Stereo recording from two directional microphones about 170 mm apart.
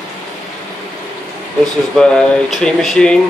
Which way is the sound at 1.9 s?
5° left (ahead or behind).